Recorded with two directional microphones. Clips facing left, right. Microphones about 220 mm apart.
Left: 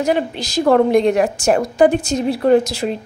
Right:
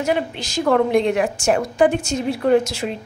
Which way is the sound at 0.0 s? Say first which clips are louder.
Left 3 dB; 35° left (ahead or behind).